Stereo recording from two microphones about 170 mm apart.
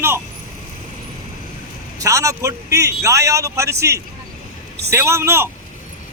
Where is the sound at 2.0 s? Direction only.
20° right (ahead or behind).